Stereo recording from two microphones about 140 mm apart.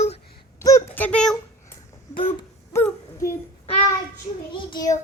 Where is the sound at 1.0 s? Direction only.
10° left (ahead or behind).